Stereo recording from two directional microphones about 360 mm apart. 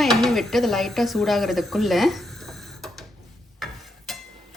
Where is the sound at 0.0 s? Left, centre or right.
Centre.